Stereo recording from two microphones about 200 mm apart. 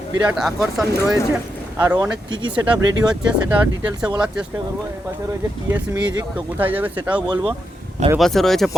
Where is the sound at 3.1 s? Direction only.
5° right (ahead or behind).